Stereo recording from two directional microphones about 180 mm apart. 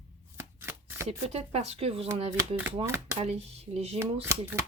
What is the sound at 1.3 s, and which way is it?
Speech, 35° right (ahead or behind).